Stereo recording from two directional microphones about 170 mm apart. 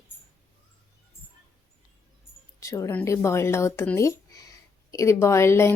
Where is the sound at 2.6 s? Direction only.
20° left (ahead or behind).